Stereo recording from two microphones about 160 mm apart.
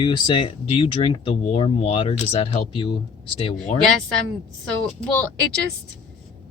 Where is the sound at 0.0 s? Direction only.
30° left (ahead or behind).